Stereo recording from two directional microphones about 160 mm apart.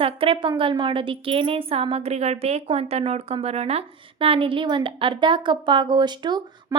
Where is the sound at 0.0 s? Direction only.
35° right (ahead or behind).